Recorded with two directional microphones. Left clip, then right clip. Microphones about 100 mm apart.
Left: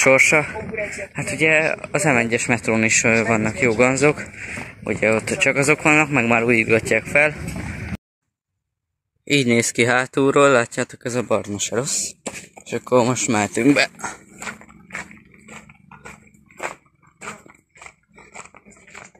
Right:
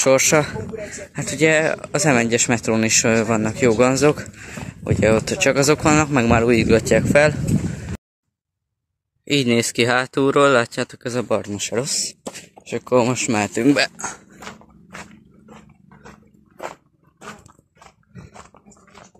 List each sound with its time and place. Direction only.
0.0 s speech: 10° right (ahead or behind)
0.6 s speech: 35° right (ahead or behind)
6.8 s speech: 10° right (ahead or behind)
9.2 s speech: 10° right (ahead or behind)
17.2 s dog: centre (ahead or behind)